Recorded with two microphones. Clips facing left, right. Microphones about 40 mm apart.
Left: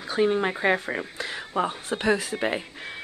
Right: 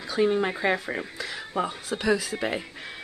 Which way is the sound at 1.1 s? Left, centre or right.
Left.